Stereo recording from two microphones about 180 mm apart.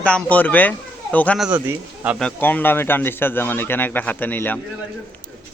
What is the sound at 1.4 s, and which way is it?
Speech, 10° right (ahead or behind).